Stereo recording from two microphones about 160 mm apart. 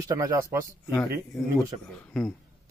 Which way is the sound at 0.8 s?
20° left (ahead or behind).